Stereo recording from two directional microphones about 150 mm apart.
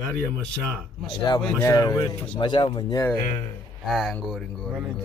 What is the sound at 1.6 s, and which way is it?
A man's voice, 25° left (ahead or behind).